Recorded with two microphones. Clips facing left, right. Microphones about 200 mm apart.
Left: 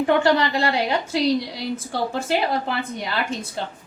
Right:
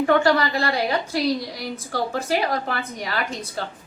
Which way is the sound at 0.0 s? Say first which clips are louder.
Even; 25° left (ahead or behind).